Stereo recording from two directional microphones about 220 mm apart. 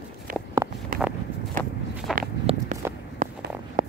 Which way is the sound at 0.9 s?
40° right (ahead or behind).